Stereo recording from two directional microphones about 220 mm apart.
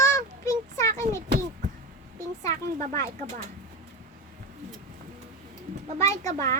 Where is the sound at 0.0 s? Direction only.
15° left (ahead or behind).